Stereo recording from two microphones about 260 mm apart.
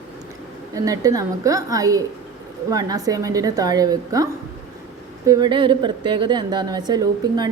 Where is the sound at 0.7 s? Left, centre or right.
Centre.